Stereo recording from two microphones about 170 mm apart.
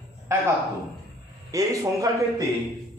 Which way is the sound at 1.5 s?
20° right (ahead or behind).